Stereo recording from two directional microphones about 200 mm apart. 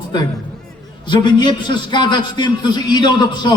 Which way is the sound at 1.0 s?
20° left (ahead or behind).